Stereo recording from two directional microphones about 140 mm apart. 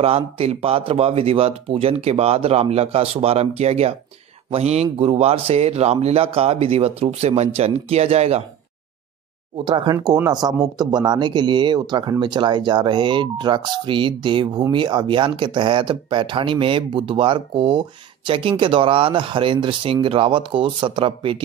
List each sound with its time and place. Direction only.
0.0 s speech: 45° right (ahead or behind)
9.7 s speech: 35° right (ahead or behind)